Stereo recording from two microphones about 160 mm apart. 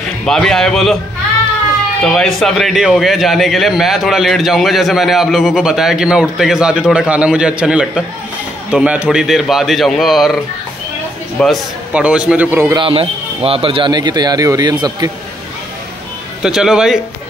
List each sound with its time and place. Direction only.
0.2 s a man's voice: centre (ahead or behind)
2.0 s a man's voice: centre (ahead or behind)
11.3 s a man's voice: centre (ahead or behind)
12.7 s speech: 35° right (ahead or behind)
16.4 s a man's voice: 5° right (ahead or behind)